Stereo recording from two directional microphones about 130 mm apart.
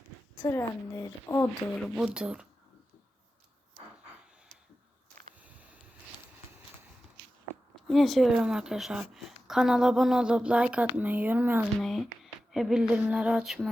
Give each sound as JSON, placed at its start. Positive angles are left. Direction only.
{"t": 0.4, "sound": "speech", "side_deg": 25}
{"t": 1.8, "sound": "speech", "side_deg": -5}
{"t": 5.4, "sound": "a sound", "side_deg": -10}
{"t": 7.9, "sound": "a woman's voice", "side_deg": 0}
{"t": 11.8, "sound": "a woman's voice", "side_deg": 0}